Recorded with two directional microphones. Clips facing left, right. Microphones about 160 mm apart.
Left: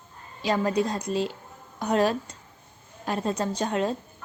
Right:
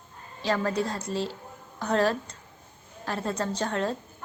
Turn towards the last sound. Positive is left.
turn(degrees=15)  # may be behind; listen again after turning